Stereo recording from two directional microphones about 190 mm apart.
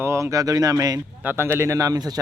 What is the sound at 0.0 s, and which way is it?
A man's voice, 15° right (ahead or behind).